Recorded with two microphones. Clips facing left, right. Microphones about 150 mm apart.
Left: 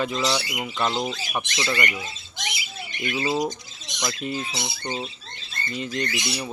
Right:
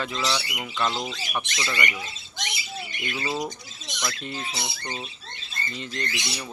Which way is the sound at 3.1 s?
20° left (ahead or behind).